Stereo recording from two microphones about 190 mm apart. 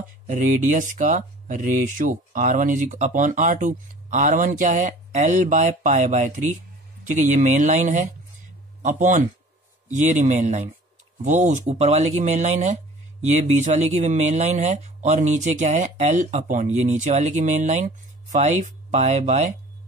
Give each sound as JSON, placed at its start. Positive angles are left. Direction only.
{"t": 0.3, "sound": "a man's voice", "side_deg": -40}